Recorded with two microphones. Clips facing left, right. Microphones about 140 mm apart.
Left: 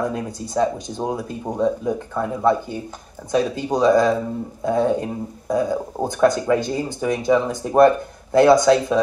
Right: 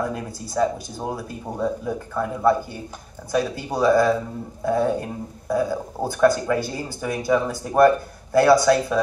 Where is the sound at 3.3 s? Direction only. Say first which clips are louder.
Left 3 dB; 20° left (ahead or behind).